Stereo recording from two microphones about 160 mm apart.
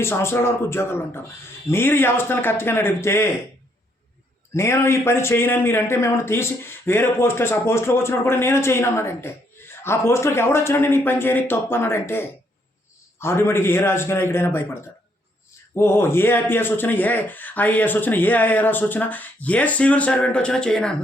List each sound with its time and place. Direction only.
0.0 s a man's voice: 15° left (ahead or behind)
4.5 s a man's voice: 15° left (ahead or behind)